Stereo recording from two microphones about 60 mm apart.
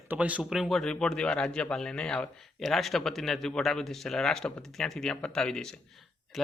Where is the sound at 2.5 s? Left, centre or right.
Centre.